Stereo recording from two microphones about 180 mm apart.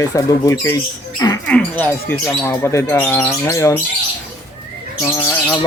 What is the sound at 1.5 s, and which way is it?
Speech, 10° left (ahead or behind).